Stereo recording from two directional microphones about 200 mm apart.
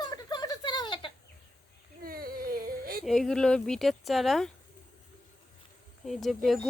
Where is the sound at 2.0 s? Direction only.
45° right (ahead or behind).